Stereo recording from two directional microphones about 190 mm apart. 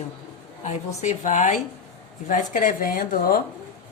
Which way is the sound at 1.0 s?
40° left (ahead or behind).